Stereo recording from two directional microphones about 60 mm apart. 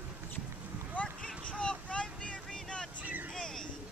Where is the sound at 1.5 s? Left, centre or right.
Centre.